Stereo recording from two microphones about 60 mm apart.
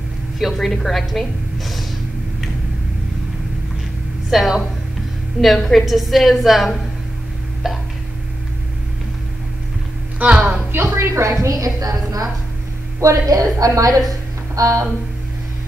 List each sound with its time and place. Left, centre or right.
0.4 s a woman's voice: centre
4.3 s a woman's voice: centre
7.6 s a sound: centre
10.3 s a woman's voice: centre
10.7 s speech: right
11.2 s a woman's voice: right
13.0 s a woman's voice: right
14.5 s a sound: right